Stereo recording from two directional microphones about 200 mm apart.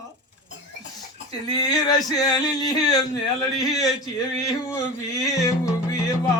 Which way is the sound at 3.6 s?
20° left (ahead or behind).